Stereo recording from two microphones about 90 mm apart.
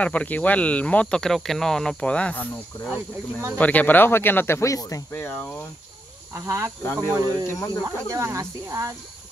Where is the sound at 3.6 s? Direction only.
15° left (ahead or behind); by 5.0 s 35° left (ahead or behind).